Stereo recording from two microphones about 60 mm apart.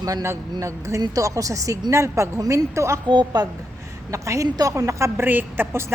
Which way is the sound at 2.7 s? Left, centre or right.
Right.